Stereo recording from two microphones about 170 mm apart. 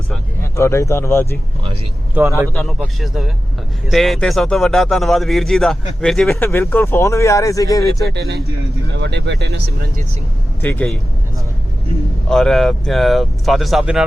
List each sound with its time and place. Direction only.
0.5 s speech: 15° left (ahead or behind)
2.2 s a man's voice: 10° right (ahead or behind)
2.6 s a man's voice: centre (ahead or behind); by 8.0 s 20° left (ahead or behind)
8.1 s speech: 75° right (ahead or behind)
9.0 s speech: 90° right
10.6 s speech: 10° left (ahead or behind)
12.3 s a man's voice: 5° left (ahead or behind)